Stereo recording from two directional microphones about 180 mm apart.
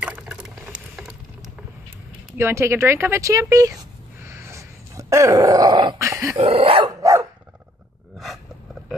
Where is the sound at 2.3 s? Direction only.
15° right (ahead or behind).